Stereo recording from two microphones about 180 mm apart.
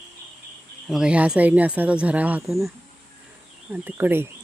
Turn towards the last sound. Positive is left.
turn(degrees=-10)  # may be behind; listen again after turning